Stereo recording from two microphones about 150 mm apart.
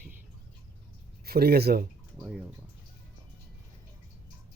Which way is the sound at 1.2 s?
90° right.